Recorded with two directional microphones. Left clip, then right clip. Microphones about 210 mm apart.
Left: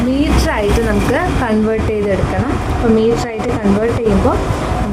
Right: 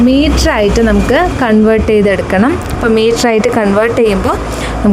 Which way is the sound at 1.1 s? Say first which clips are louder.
Right 6 dB; 35° right (ahead or behind).